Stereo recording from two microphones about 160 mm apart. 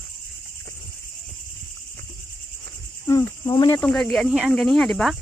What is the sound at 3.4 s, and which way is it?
Cricket, 25° left (ahead or behind).